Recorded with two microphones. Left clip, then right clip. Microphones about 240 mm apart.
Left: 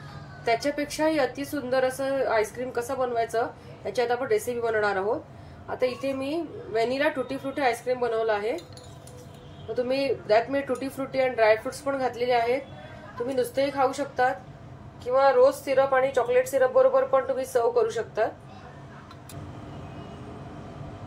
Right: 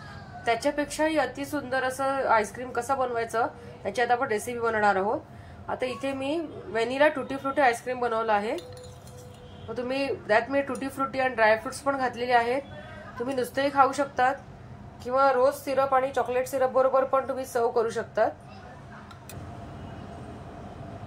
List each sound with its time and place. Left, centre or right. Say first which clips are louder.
0.5 s a woman's voice: even; centre
9.8 s a woman's voice: left 2 dB; centre
15.0 s a woman's voice: left 3 dB; right